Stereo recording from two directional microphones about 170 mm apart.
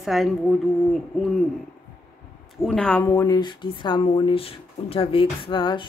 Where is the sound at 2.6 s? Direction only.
5° left (ahead or behind).